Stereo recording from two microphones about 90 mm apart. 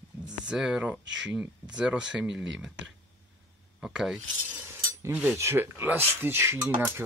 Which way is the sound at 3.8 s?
5° right (ahead or behind).